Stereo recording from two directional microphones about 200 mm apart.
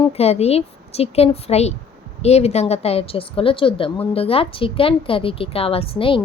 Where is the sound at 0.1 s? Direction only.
30° left (ahead or behind).